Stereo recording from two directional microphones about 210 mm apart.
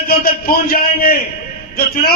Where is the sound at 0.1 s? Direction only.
45° left (ahead or behind).